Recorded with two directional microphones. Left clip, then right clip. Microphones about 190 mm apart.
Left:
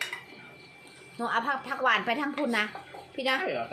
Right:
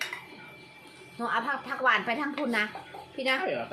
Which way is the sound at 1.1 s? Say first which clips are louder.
Left 1 dB; 20° left (ahead or behind).